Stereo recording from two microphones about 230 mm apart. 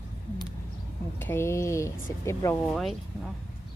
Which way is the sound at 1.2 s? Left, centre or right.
Centre.